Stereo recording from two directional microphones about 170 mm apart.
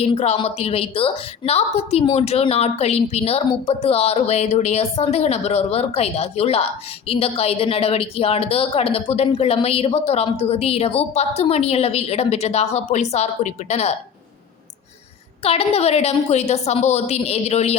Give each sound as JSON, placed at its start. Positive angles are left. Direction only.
{"t": 0.0, "sound": "a woman's voice", "side_deg": 35}
{"t": 15.4, "sound": "a woman's voice", "side_deg": 35}